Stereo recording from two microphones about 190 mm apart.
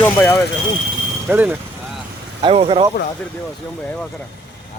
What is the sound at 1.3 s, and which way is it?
Speech, 10° right (ahead or behind).